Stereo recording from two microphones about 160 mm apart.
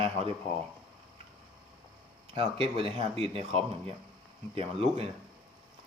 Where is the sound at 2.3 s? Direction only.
35° right (ahead or behind).